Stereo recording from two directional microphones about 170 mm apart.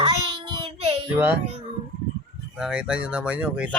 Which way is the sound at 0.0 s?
30° right (ahead or behind).